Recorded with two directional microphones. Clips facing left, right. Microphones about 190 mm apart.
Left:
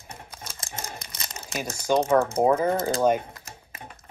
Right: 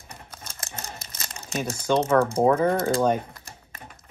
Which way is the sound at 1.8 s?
15° left (ahead or behind).